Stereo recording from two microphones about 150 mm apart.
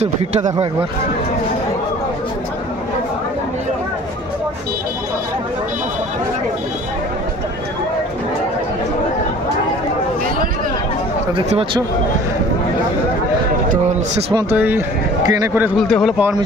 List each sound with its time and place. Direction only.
0.0 s speech: 45° right (ahead or behind)
13.7 s a man's voice: 50° right (ahead or behind)
14.3 s speech: 15° right (ahead or behind)
15.9 s speech: centre (ahead or behind)